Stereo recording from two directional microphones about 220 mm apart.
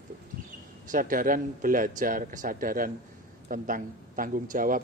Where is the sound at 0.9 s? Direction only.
40° right (ahead or behind).